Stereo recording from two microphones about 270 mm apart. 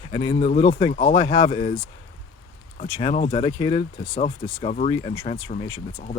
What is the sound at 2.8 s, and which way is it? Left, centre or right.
Speech, centre.